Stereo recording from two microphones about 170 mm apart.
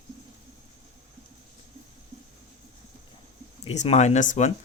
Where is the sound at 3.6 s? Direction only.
40° left (ahead or behind).